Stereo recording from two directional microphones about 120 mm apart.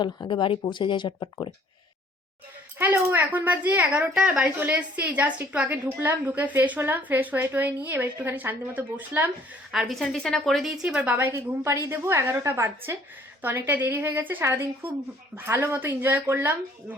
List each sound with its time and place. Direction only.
0.0 s speech: 40° left (ahead or behind)
2.7 s a woman's voice: 15° right (ahead or behind)
9.8 s a woman's voice: 5° left (ahead or behind); by 16.6 s 15° right (ahead or behind)